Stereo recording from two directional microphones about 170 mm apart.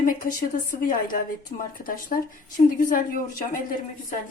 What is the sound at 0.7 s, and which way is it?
A woman's voice, 55° left (ahead or behind).